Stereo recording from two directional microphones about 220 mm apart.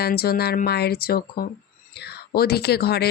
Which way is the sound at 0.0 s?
45° left (ahead or behind).